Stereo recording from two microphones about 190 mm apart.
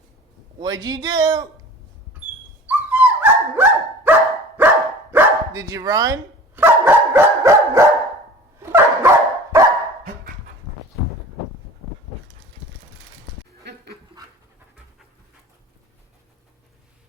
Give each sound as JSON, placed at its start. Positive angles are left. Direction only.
{"t": 0.6, "sound": "speech", "side_deg": -20}
{"t": 2.6, "sound": "dog", "side_deg": -10}